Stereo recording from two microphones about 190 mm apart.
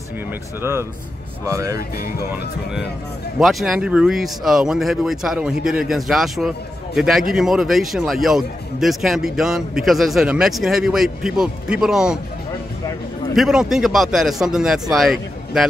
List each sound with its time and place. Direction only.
0.6 s speech: 15° right (ahead or behind)
3.3 s a man's voice: centre (ahead or behind)
13.4 s a man's voice: centre (ahead or behind)